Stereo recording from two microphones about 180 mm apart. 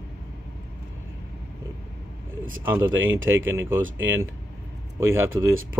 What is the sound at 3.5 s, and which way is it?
Speech, 15° right (ahead or behind).